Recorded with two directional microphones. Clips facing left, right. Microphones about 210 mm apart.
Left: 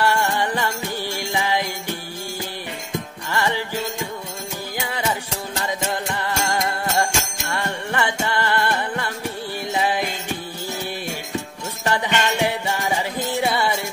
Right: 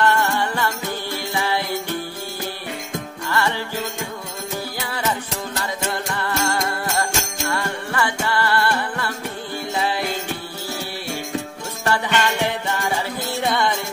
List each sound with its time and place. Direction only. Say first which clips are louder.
0.0 s music: right 1 dB; 15° left (ahead or behind)
3.3 s music: right 1 dB; 15° left (ahead or behind)
11.8 s music: right 1 dB; 15° left (ahead or behind)